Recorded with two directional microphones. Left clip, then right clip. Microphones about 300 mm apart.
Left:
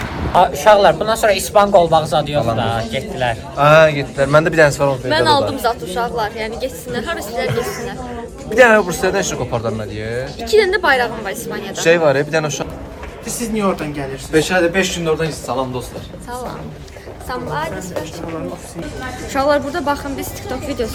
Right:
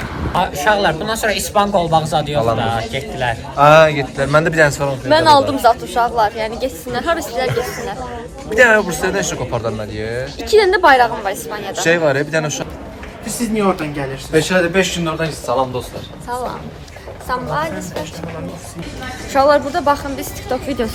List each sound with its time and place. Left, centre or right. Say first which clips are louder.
0.3 s a man's voice: left 5 dB; left
5.0 s a woman's voice: right 6 dB; centre
7.5 s a man's voice: right 1 dB; centre
10.4 s a woman's voice: right 3 dB; centre
11.9 s a man's voice: left 2 dB; centre
14.3 s a woman's voice: even; centre
19.3 s a woman's voice: right 4 dB; centre
20.7 s a woman's voice: left 3 dB; centre